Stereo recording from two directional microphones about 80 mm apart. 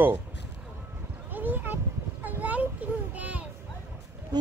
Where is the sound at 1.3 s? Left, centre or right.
Right.